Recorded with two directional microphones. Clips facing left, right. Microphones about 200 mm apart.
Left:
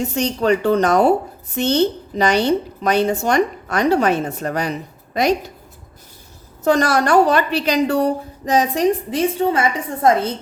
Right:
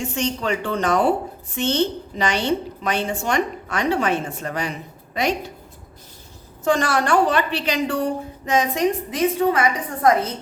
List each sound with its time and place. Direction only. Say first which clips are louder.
0.0 s a woman's voice: left 5 dB; 40° left (ahead or behind)
6.7 s a woman's voice: left 4 dB; 40° left (ahead or behind)